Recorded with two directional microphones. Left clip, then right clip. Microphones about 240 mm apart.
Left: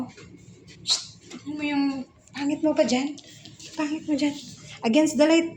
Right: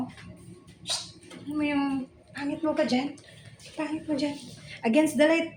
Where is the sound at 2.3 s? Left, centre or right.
Centre.